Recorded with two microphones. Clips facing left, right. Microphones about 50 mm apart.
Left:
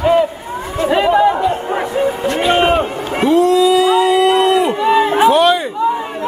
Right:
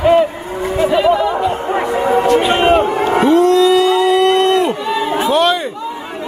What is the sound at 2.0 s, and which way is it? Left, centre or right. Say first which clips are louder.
Music: right 5 dB; right.